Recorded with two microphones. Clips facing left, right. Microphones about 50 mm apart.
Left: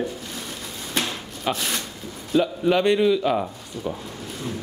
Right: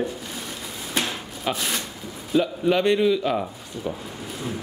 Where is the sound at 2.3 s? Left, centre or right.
Centre.